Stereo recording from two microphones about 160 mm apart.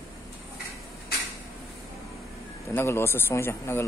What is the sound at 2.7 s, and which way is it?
Speech, 15° left (ahead or behind).